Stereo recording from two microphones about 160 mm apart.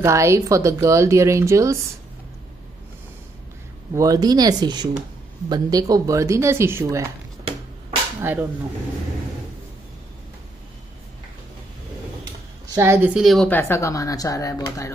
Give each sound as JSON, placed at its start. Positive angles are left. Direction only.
{"t": 0.0, "sound": "a woman's voice", "side_deg": -15}
{"t": 3.9, "sound": "speech", "side_deg": -20}
{"t": 8.2, "sound": "a woman's voice", "side_deg": -10}
{"t": 12.7, "sound": "a woman's voice", "side_deg": -15}
{"t": 13.1, "sound": "a woman's voice", "side_deg": 0}
{"t": 13.5, "sound": "speech", "side_deg": 15}